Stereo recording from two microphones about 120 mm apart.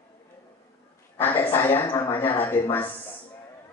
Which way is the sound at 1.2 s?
15° left (ahead or behind).